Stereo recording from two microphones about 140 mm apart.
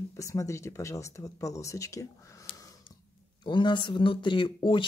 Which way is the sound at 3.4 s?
35° left (ahead or behind).